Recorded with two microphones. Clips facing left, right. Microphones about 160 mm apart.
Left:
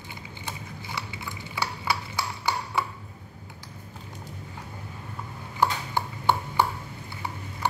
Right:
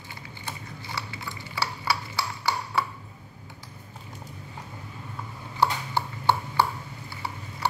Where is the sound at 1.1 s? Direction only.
20° left (ahead or behind).